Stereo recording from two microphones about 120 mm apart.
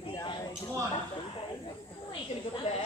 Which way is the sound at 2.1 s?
45° left (ahead or behind).